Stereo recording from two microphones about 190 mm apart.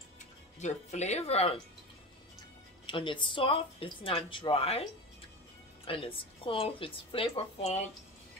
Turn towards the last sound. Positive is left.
turn(degrees=35)  # may be behind; listen again after turning